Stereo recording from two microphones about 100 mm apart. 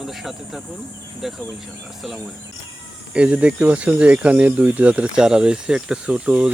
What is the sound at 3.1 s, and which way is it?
Speech, 10° right (ahead or behind).